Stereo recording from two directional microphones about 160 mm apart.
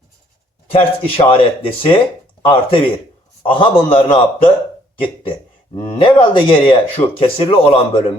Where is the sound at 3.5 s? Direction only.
35° left (ahead or behind).